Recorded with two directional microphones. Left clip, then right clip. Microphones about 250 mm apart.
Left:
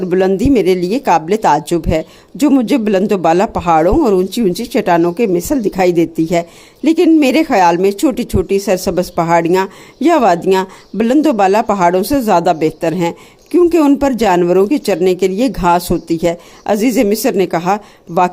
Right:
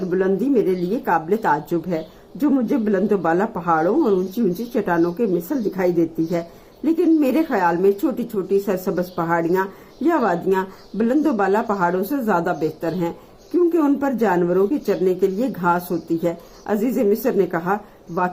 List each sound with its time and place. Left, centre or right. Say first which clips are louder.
0.1 s a woman's voice: left 7 dB; left